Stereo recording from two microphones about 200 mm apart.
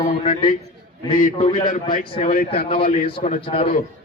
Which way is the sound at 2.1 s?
30° left (ahead or behind).